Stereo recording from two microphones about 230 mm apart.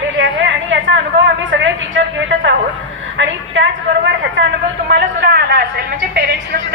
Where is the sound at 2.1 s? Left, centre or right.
Right.